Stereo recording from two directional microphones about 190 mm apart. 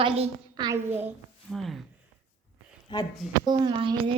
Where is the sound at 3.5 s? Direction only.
25° right (ahead or behind).